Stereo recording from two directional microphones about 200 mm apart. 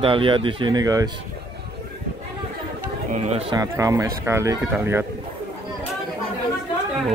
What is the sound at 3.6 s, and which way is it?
Speech, 15° right (ahead or behind).